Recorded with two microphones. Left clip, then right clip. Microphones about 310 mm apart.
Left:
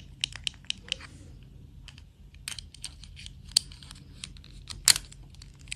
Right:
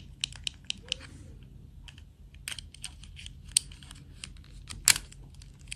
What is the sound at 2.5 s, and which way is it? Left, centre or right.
Scissors, centre.